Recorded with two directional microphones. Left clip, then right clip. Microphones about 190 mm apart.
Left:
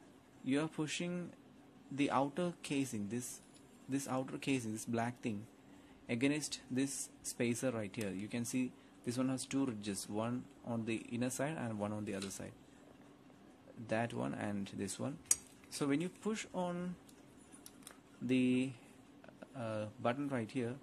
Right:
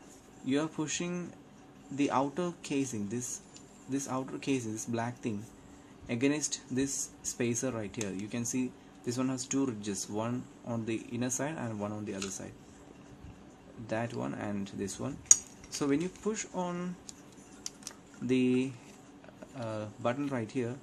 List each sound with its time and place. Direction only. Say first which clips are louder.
0.5 s speech: right 5 dB; 15° left (ahead or behind)
13.8 s speech: right 3 dB; 20° left (ahead or behind)
18.2 s speech: right 5 dB; 15° left (ahead or behind)